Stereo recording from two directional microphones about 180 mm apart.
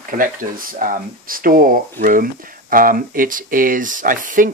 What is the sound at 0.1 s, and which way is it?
Speech, 50° right (ahead or behind).